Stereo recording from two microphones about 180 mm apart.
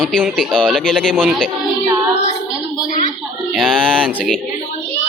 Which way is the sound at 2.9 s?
45° left (ahead or behind).